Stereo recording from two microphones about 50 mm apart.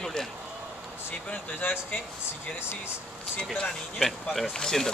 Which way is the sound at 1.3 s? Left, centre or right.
Left.